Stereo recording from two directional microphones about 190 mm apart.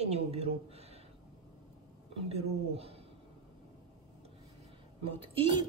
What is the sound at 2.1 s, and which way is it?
Speech, 30° right (ahead or behind).